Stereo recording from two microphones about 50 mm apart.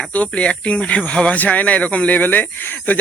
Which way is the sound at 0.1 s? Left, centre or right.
Left.